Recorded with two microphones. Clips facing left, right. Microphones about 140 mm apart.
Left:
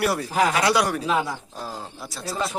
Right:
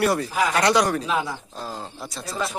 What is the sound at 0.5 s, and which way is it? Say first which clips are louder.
Speech: right 2 dB; 5° left (ahead or behind).